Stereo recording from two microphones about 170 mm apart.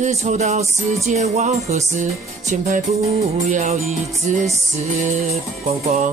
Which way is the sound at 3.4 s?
45° right (ahead or behind).